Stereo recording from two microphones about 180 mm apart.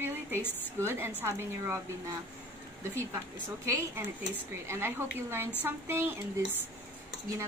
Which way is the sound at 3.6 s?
15° right (ahead or behind).